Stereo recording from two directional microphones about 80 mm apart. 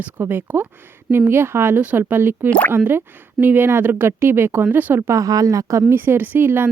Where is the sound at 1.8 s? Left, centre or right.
Centre.